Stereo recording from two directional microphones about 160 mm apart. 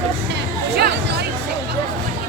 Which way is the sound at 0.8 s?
75° right (ahead or behind).